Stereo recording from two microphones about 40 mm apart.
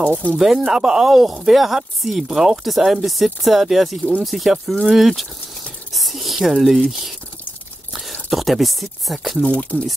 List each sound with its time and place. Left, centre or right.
0.1 s speech: left
0.4 s speech: centre
5.9 s a sound: centre
7.9 s speech: centre
9.4 s speech: left